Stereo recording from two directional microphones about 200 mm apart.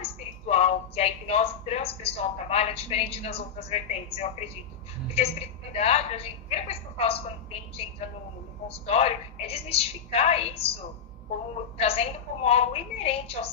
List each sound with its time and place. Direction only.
0.0 s a sound: 30° left (ahead or behind)
2.2 s a woman's voice: 30° left (ahead or behind)
8.6 s a woman's voice: 30° left (ahead or behind)
11.8 s a woman's voice: 30° left (ahead or behind)